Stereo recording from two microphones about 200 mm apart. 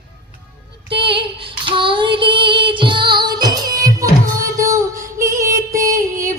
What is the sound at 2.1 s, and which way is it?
Music, 25° right (ahead or behind).